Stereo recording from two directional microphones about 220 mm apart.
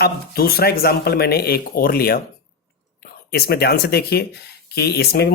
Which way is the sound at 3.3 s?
45° left (ahead or behind).